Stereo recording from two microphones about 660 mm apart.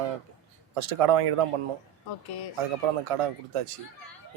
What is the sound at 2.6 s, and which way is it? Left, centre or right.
Speech, right.